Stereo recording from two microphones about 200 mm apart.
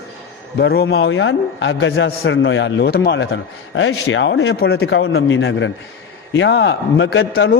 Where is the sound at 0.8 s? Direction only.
70° left (ahead or behind).